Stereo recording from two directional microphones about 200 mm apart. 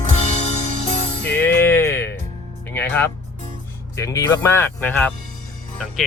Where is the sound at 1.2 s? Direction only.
10° left (ahead or behind).